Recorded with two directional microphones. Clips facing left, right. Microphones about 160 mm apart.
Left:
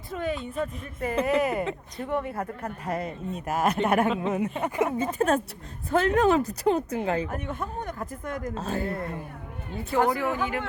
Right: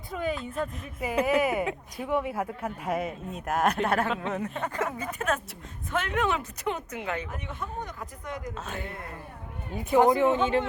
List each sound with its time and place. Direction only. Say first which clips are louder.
0.1 s speech: left 1 dB; centre (ahead or behind)
4.6 s speech: left 5 dB; 20° left (ahead or behind); by 7.3 s 35° left (ahead or behind)
7.3 s speech: left 5 dB; 50° left (ahead or behind)
8.5 s speech: left 7 dB; 35° left (ahead or behind)
9.7 s speech: right 3 dB; 20° right (ahead or behind)